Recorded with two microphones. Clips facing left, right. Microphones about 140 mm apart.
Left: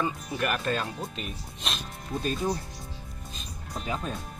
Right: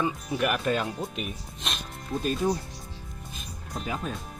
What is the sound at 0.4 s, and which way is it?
Speech, 10° right (ahead or behind).